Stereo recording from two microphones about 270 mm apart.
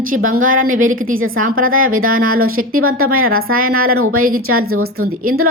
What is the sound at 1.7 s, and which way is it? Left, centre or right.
Speech, right.